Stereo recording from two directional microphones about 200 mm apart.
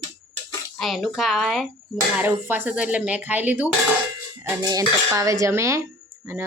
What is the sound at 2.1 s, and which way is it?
Music, 10° right (ahead or behind).